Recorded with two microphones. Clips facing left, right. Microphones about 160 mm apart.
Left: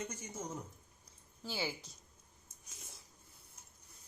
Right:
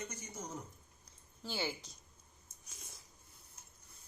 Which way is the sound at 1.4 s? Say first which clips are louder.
Even; 5° left (ahead or behind).